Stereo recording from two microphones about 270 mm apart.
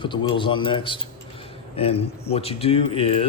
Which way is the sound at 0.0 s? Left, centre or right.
Centre.